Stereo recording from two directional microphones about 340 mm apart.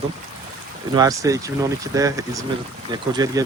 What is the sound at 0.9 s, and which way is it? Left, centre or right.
Speech, centre.